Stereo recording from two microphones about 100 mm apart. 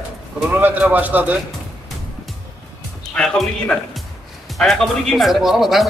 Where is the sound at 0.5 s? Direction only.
20° right (ahead or behind).